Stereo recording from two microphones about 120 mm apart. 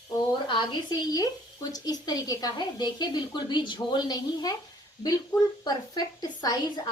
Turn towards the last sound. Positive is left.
turn(degrees=35)  # may be behind; listen again after turning